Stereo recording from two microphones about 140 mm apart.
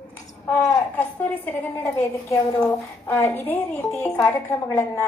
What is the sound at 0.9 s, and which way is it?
A woman's voice, 10° left (ahead or behind).